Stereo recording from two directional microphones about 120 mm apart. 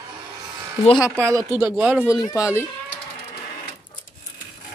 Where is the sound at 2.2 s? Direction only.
25° left (ahead or behind).